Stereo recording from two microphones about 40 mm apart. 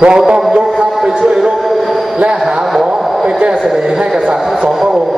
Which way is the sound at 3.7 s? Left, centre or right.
Centre.